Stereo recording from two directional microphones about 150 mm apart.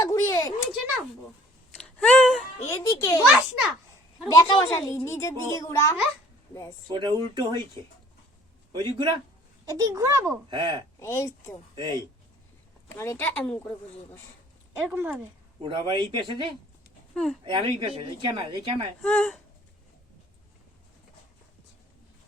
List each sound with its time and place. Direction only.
0.0 s a sound: 20° left (ahead or behind)
1.7 s a sound: 5° left (ahead or behind)
2.6 s a sound: 20° left (ahead or behind)
3.2 s a sound: 5° right (ahead or behind)
4.3 s a child's voice: 25° left (ahead or behind)
6.8 s a child's voice: 30° right (ahead or behind)
8.7 s a woman's voice: 30° right (ahead or behind)
11.0 s speech: 20° left (ahead or behind)
11.7 s speech: 30° right (ahead or behind)
12.9 s speech: 15° left (ahead or behind)
14.8 s speech: 15° right (ahead or behind)
15.6 s a woman's voice: 30° right (ahead or behind)
19.0 s speech: 5° left (ahead or behind)